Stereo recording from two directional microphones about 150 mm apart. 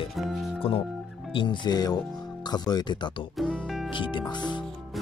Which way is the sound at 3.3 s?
Centre (ahead or behind).